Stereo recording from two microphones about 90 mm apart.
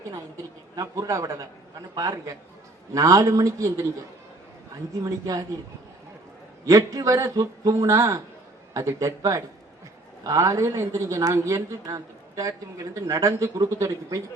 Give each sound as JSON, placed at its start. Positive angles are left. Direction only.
{"t": 0.8, "sound": "a woman's voice", "side_deg": -40}
{"t": 6.7, "sound": "a woman's voice", "side_deg": -40}